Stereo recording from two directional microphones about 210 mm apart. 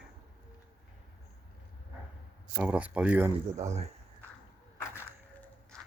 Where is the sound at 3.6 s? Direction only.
30° right (ahead or behind).